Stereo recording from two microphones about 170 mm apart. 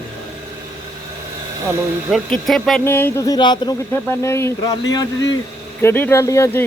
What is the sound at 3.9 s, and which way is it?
Speech, 15° left (ahead or behind).